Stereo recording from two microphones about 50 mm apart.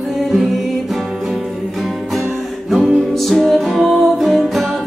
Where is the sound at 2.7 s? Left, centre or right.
Centre.